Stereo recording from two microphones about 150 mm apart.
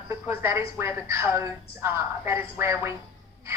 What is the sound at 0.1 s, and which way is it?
A woman's voice, 15° right (ahead or behind).